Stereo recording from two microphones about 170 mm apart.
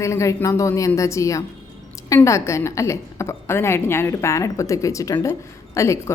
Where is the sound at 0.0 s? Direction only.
15° left (ahead or behind).